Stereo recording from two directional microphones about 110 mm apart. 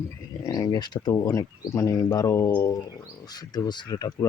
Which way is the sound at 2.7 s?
40° left (ahead or behind).